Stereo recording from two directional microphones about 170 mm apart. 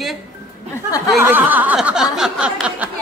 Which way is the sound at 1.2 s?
10° right (ahead or behind).